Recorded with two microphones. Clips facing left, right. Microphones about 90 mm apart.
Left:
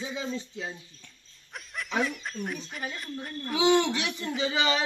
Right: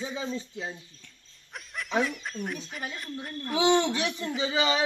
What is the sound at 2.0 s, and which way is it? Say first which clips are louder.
Speech: even; centre (ahead or behind).